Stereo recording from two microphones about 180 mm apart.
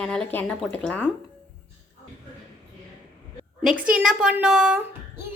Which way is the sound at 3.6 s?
5° right (ahead or behind).